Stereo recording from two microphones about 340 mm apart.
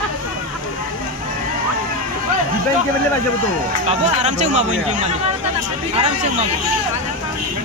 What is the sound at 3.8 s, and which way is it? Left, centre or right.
Speech, centre.